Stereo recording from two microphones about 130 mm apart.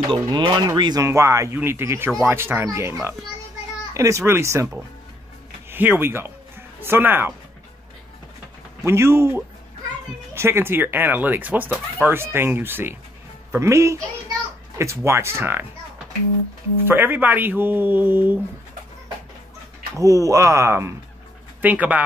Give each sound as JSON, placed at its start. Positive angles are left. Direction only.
{"t": 0.1, "sound": "speech", "side_deg": -35}
{"t": 1.0, "sound": "speech", "side_deg": -20}
{"t": 5.7, "sound": "speech", "side_deg": -15}
{"t": 8.8, "sound": "speech", "side_deg": -20}
{"t": 15.0, "sound": "speech", "side_deg": -20}
{"t": 16.8, "sound": "speech", "side_deg": -15}
{"t": 20.0, "sound": "speech", "side_deg": -25}